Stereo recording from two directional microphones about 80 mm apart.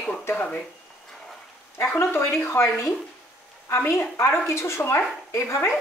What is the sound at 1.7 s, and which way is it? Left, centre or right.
A woman's voice, left.